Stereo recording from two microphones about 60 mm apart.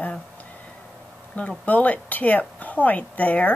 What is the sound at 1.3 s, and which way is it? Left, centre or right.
A woman's voice, left.